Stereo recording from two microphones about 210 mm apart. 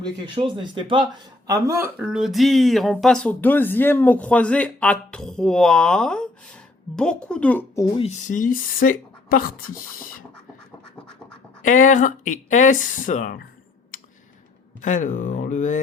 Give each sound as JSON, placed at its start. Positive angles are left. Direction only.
{"t": 0.3, "sound": "speech", "side_deg": -25}
{"t": 7.9, "sound": "speech", "side_deg": 30}
{"t": 11.6, "sound": "speech", "side_deg": 40}
{"t": 14.8, "sound": "speech", "side_deg": 35}